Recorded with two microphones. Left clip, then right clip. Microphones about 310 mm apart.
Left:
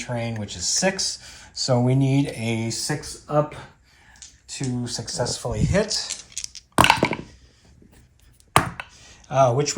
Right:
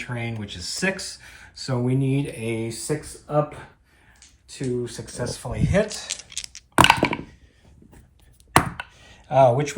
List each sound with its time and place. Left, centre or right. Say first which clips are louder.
0.0 s speech: left 3 dB; centre; by 2.9 s left
4.4 s speech: right 3 dB; left; by 6.1 s centre
6.7 s a sound: right 1 dB; centre
8.5 s chopping: even; centre